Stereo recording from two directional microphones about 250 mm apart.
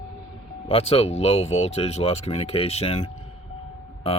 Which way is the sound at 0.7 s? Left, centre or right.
Left.